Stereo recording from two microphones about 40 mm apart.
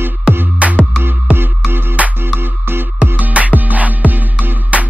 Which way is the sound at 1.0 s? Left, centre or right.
Right.